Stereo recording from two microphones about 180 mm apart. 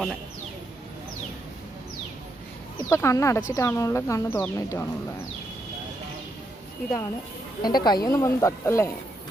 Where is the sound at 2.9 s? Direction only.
15° left (ahead or behind).